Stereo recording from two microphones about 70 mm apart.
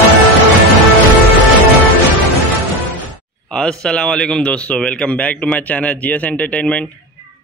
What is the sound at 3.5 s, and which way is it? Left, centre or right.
Speech, centre.